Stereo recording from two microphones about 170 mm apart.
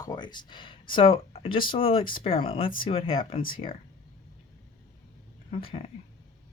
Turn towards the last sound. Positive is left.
turn(degrees=35)  # may be behind; listen again after turning